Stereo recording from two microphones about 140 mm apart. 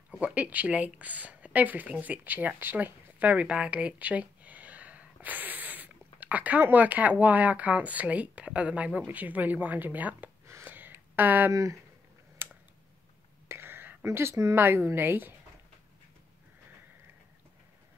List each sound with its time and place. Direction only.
0.2 s a woman's voice: 10° right (ahead or behind)
12.4 s a sound: 15° right (ahead or behind)
13.5 s a woman's voice: 15° right (ahead or behind)